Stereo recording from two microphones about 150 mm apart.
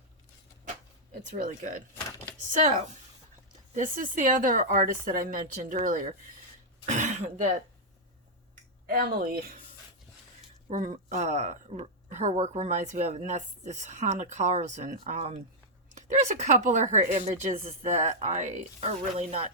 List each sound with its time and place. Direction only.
1.3 s speech: 55° right (ahead or behind)
3.8 s speech: 60° right (ahead or behind)
6.8 s speech: 55° right (ahead or behind)
8.9 s speech: 80° right
10.7 s speech: 55° right (ahead or behind); by 19.5 s 40° right (ahead or behind)